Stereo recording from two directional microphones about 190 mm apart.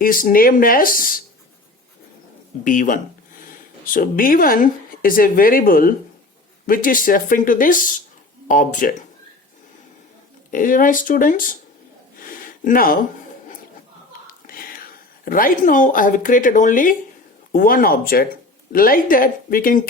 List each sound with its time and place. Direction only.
0.0 s speech: 50° left (ahead or behind)
2.6 s speech: 45° left (ahead or behind)
10.5 s speech: 45° left (ahead or behind)
12.2 s a sound: 50° left (ahead or behind)
14.4 s whispering: 50° left (ahead or behind)
15.2 s speech: 50° left (ahead or behind)